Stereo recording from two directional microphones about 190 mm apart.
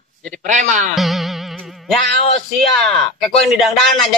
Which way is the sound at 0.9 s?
Centre (ahead or behind).